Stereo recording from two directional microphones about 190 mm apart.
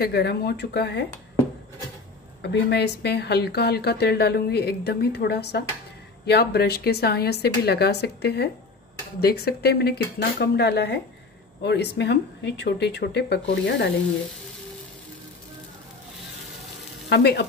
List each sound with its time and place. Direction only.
0.0 s a woman's voice: 60° left (ahead or behind)
2.4 s a woman's voice: 65° left (ahead or behind)
17.1 s a woman's voice: 60° left (ahead or behind)